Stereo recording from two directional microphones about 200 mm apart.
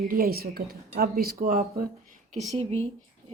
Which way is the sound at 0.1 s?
50° right (ahead or behind).